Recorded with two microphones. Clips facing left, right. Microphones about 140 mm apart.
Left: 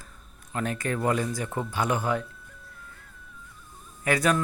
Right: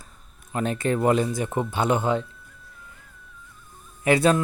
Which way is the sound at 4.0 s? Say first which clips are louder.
Right 5 dB; 25° right (ahead or behind).